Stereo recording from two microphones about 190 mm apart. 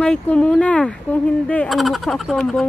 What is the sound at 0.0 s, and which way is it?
Speech, 5° left (ahead or behind).